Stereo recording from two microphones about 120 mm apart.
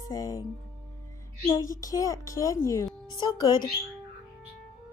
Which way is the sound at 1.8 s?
30° left (ahead or behind).